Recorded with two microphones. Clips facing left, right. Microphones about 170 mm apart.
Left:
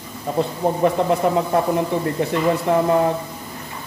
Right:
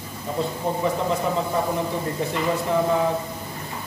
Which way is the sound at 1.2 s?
60° left (ahead or behind).